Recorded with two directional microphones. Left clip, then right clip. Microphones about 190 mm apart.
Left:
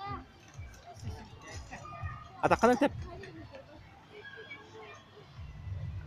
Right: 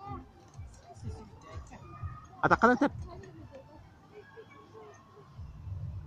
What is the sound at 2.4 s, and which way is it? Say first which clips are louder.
Speech: right 1 dB; 10° left (ahead or behind).